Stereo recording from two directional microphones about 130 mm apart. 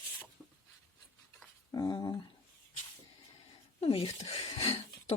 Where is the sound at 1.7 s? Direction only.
30° left (ahead or behind).